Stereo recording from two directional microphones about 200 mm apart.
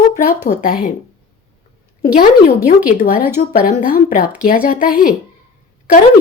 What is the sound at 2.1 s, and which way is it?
Speech, 45° left (ahead or behind).